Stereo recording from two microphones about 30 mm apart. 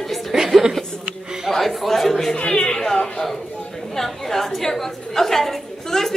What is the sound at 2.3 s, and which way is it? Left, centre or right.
Speech, left.